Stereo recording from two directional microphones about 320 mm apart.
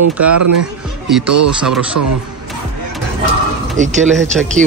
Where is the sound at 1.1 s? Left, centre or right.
Centre.